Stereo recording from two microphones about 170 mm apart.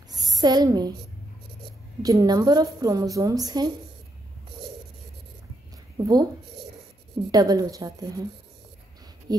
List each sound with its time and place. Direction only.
0.1 s a woman's voice: 20° right (ahead or behind)
2.0 s a woman's voice: 20° right (ahead or behind)
6.0 s a woman's voice: 20° right (ahead or behind)
7.2 s a woman's voice: 20° right (ahead or behind)
9.3 s a woman's voice: 20° right (ahead or behind)